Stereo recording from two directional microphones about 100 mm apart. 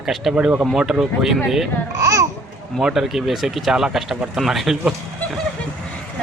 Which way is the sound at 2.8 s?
5° right (ahead or behind).